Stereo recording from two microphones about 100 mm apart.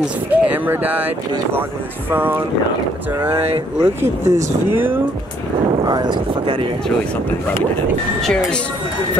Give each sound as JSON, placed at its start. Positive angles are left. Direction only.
{"t": 0.3, "sound": "speech", "side_deg": -15}
{"t": 3.8, "sound": "speech", "side_deg": -25}
{"t": 5.9, "sound": "speech", "side_deg": -45}
{"t": 8.2, "sound": "speech", "side_deg": 5}